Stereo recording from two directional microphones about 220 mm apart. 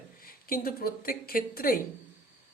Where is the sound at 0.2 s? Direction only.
40° left (ahead or behind).